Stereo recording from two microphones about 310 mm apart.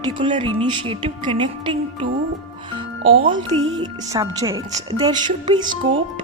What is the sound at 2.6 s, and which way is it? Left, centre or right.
Music, centre.